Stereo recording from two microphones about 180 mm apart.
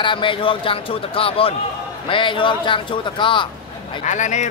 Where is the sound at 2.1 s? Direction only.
25° left (ahead or behind).